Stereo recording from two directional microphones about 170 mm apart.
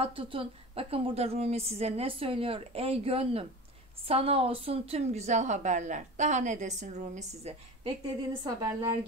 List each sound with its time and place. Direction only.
0.0 s a woman's voice: 30° right (ahead or behind)
8.5 s a woman's voice: 20° right (ahead or behind)